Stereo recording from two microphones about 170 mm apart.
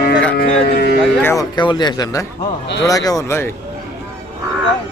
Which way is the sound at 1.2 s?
25° left (ahead or behind).